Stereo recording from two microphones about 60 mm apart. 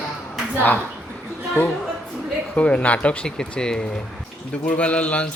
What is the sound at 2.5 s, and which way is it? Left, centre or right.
Speech, left.